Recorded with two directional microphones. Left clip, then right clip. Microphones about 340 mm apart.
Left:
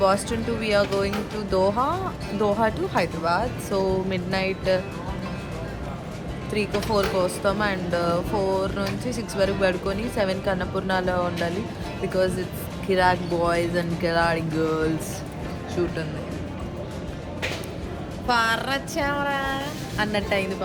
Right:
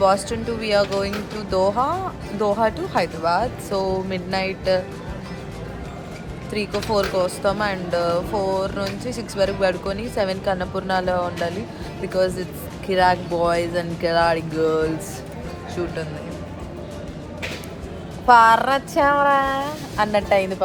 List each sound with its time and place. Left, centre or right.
0.0 s speech: centre
6.5 s speech: centre
18.3 s speech: right